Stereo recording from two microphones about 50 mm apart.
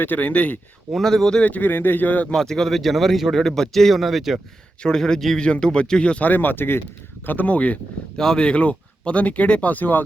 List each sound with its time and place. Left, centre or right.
0.0 s speech: left
0.9 s speech: centre
1.4 s speech: left
1.7 s speech: left
2.3 s a man's voice: centre
4.8 s speech: centre
6.2 s speech: left
7.3 s speech: left
8.1 s speech: centre; by 10.0 s left